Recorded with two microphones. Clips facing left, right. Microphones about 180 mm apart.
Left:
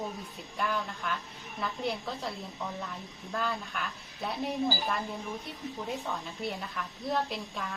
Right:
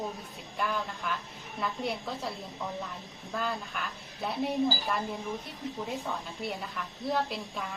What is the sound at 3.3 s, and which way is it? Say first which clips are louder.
A woman's voice: even; centre (ahead or behind).